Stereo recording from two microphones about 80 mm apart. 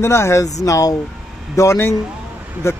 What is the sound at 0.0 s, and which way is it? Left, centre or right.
Speech, left.